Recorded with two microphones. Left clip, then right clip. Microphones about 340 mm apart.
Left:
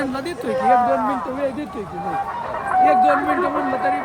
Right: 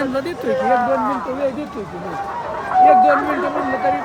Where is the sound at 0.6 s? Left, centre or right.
Left.